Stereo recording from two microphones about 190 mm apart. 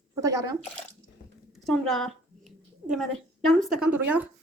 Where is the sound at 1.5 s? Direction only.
Centre (ahead or behind).